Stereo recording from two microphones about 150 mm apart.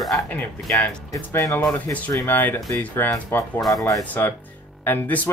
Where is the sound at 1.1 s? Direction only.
20° left (ahead or behind).